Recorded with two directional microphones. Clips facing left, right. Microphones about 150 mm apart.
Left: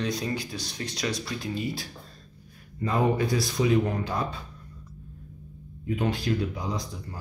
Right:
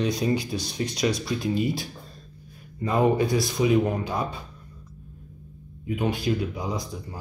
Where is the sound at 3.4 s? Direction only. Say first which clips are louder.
Right 2 dB; 15° right (ahead or behind).